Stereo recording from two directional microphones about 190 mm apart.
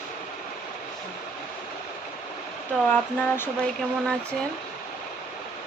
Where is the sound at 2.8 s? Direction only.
10° left (ahead or behind).